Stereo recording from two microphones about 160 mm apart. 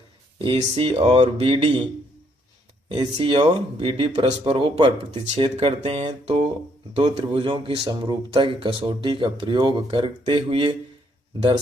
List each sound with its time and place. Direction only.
0.3 s speech: 35° right (ahead or behind)
2.9 s speech: 30° right (ahead or behind)